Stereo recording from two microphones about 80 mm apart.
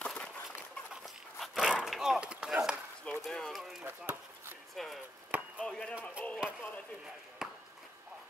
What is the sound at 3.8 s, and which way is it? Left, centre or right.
Chop, right.